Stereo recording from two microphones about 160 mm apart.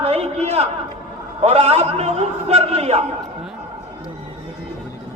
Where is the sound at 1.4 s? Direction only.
40° right (ahead or behind).